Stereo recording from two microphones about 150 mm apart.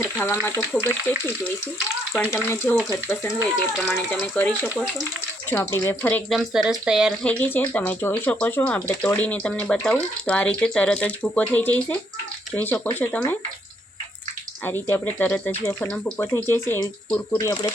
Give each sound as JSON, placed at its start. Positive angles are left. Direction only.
{"t": 0.0, "sound": "speech", "side_deg": 15}
{"t": 2.1, "sound": "speech", "side_deg": 15}
{"t": 3.8, "sound": "speech", "side_deg": 10}
{"t": 6.3, "sound": "speech", "side_deg": 0}
{"t": 7.2, "sound": "speech", "side_deg": 10}
{"t": 14.6, "sound": "speech", "side_deg": 15}